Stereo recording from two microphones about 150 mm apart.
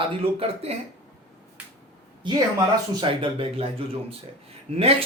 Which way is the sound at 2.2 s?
30° right (ahead or behind).